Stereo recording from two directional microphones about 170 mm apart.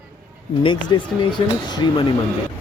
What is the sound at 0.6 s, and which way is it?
Speech, 30° left (ahead or behind).